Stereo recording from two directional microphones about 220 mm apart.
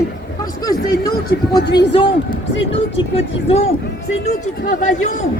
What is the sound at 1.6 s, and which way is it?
Speech, 50° left (ahead or behind).